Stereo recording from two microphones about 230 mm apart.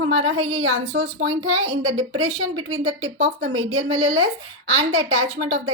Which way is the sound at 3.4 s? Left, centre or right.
Right.